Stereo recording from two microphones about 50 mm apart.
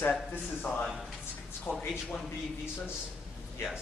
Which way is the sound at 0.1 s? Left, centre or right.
Left.